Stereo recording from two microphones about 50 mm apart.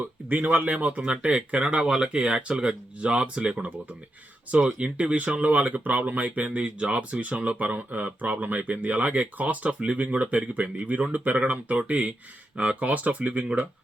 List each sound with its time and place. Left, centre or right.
0.0 s speech: right